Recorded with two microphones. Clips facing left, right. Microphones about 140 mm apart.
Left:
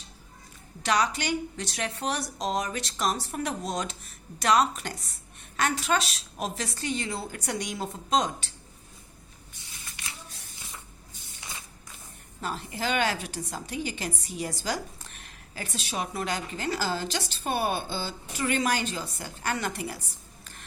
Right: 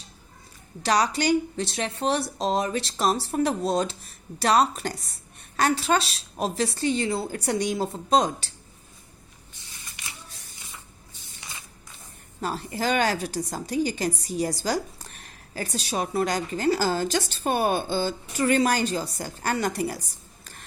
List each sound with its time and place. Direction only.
0.8 s a woman's voice: 35° right (ahead or behind)
12.4 s a woman's voice: 40° right (ahead or behind)